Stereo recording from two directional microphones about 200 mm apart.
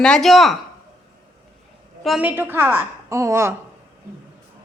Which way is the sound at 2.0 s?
5° right (ahead or behind).